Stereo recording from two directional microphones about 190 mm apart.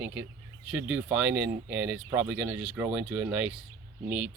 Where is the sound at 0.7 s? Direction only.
5° right (ahead or behind).